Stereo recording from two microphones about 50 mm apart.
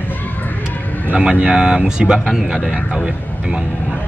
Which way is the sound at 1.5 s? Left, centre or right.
Centre.